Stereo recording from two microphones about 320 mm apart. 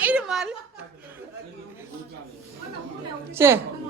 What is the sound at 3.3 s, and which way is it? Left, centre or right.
Speech, centre.